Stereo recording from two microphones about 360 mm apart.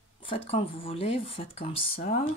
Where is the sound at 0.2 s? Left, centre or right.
Centre.